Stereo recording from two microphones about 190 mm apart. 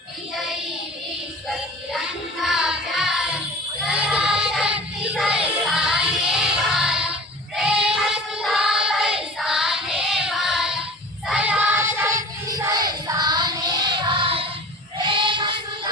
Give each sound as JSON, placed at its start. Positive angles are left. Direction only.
{"t": 2.4, "sound": "music", "side_deg": 0}
{"t": 3.8, "sound": "child singing", "side_deg": -5}
{"t": 5.6, "sound": "music", "side_deg": 0}
{"t": 7.9, "sound": "child singing", "side_deg": 0}
{"t": 13.1, "sound": "music", "side_deg": -20}